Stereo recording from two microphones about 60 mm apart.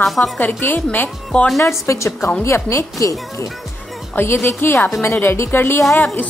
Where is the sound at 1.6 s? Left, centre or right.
Left.